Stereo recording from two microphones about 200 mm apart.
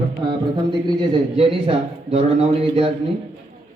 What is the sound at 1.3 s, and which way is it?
A man's voice, 25° right (ahead or behind).